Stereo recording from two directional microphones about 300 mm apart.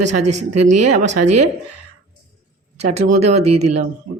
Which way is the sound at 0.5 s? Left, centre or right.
Right.